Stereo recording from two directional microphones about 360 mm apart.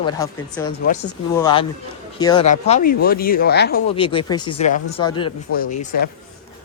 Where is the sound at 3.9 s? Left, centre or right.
Centre.